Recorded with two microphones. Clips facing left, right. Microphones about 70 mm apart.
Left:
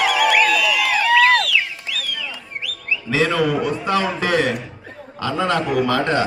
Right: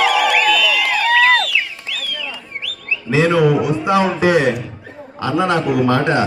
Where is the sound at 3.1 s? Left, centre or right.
Centre.